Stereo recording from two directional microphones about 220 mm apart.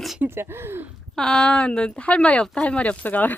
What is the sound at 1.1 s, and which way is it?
Speech, 5° left (ahead or behind).